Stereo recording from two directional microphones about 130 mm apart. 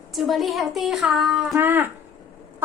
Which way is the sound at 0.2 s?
Centre (ahead or behind).